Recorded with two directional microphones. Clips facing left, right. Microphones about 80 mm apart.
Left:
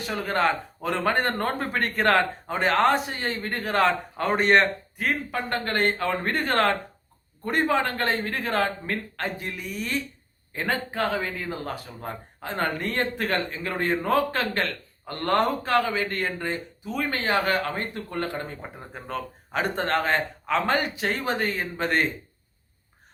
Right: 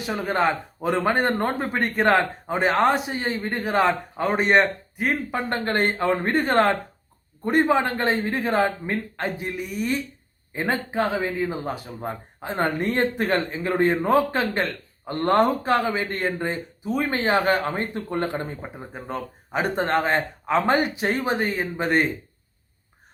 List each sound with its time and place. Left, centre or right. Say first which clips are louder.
0.0 s a man's voice: right 2 dB; centre
5.0 s a man's voice: right 3 dB; right
19.0 s a man's voice: even; centre